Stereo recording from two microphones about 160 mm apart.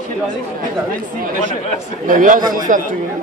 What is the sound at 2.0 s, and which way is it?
Speech, 55° right (ahead or behind).